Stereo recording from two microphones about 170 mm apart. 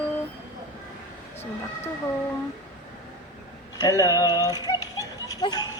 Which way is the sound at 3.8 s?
20° left (ahead or behind).